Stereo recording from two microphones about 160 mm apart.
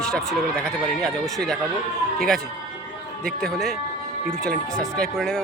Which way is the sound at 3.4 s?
Centre (ahead or behind).